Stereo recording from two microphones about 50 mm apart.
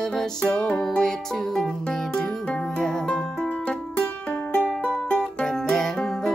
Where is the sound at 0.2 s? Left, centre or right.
Centre.